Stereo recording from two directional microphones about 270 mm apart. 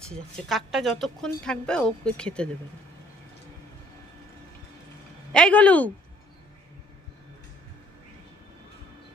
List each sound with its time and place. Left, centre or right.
0.5 s a woman's voice: centre
5.3 s a woman's voice: centre